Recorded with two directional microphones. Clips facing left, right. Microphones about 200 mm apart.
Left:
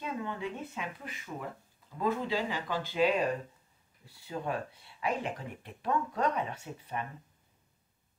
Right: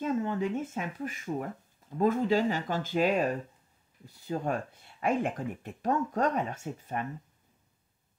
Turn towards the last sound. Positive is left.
turn(degrees=-45)  # may be behind; listen again after turning